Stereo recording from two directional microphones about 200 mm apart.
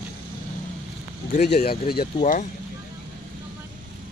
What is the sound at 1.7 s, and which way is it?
Speech, 50° left (ahead or behind).